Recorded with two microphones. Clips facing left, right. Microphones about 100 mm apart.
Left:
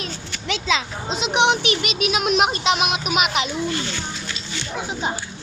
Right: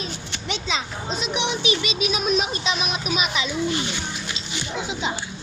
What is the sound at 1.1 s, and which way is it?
Speech, 90° left.